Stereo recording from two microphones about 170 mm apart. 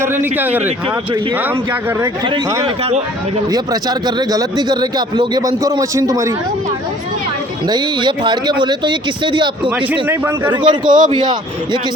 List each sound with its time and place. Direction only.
0.0 s speech: 10° right (ahead or behind)
2.6 s speech: 35° right (ahead or behind)
3.5 s a man's voice: 25° right (ahead or behind)
7.7 s a man's voice: 25° right (ahead or behind)
9.6 s speech: 10° right (ahead or behind)
10.5 s a man's voice: 25° right (ahead or behind)